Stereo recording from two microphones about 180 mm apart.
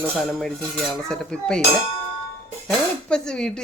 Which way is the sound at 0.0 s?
Centre (ahead or behind).